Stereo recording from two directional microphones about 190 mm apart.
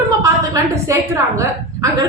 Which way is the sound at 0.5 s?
15° right (ahead or behind).